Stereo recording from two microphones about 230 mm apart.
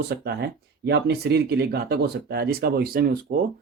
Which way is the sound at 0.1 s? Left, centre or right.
Right.